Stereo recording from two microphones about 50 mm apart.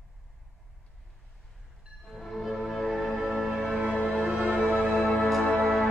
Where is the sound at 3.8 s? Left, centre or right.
Centre.